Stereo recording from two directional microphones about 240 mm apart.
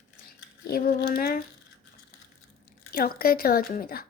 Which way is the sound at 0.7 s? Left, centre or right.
Left.